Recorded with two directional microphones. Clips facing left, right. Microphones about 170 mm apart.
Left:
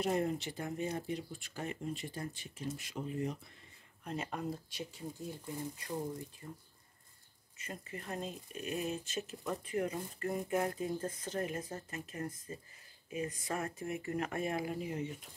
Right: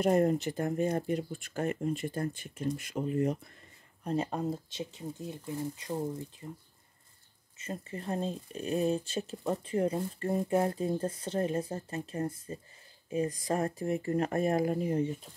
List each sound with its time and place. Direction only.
0.0 s speech: 50° right (ahead or behind)
4.0 s speech: 35° right (ahead or behind)